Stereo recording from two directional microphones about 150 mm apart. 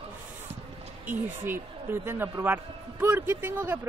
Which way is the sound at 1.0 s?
15° right (ahead or behind).